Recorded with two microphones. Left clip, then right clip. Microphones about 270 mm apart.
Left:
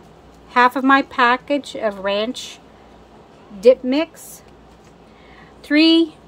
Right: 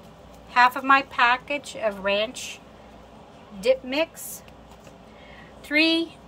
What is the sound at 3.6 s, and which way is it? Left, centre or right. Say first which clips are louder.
Speech: left 8 dB; left.